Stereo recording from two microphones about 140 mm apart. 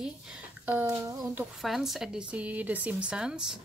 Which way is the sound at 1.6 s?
Centre (ahead or behind).